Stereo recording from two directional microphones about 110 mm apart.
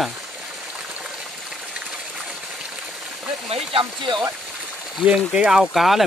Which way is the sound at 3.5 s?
55° right (ahead or behind).